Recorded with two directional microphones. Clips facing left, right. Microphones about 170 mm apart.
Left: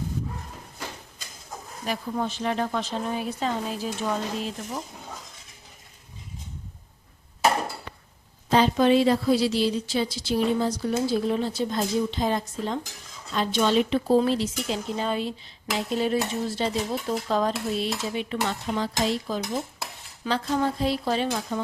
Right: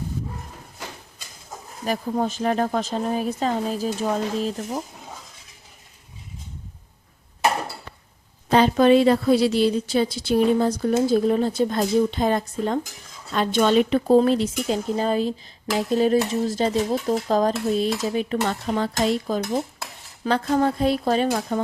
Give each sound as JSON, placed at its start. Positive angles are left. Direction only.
{"t": 1.8, "sound": "speech", "side_deg": -40}
{"t": 8.4, "sound": "a woman's voice", "side_deg": -55}